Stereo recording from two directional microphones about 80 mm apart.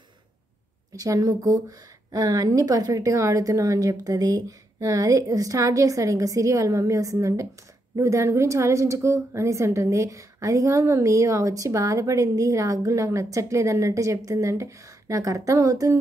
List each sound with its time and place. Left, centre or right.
0.9 s a woman's voice: right